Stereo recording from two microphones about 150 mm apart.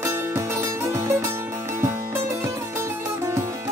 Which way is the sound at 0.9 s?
15° right (ahead or behind).